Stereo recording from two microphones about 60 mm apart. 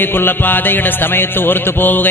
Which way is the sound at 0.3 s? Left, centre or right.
Left.